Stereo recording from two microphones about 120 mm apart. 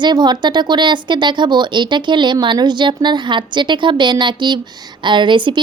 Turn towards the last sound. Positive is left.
turn(degrees=-40)  # may be behind; listen again after turning